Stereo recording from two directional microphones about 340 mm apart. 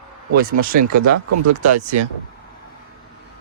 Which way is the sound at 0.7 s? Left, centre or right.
Right.